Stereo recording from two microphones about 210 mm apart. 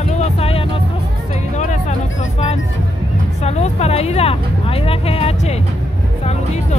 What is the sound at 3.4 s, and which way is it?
Music, 30° left (ahead or behind).